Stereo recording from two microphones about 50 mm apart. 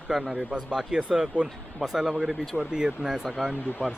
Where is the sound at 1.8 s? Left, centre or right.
Centre.